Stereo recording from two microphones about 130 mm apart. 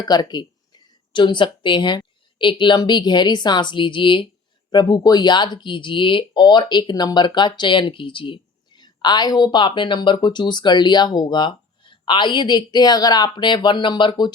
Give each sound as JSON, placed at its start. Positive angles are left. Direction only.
{"t": 0.0, "sound": "speech", "side_deg": 30}